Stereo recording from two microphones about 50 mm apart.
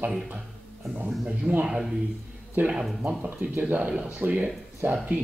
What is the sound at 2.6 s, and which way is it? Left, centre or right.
Speech, right.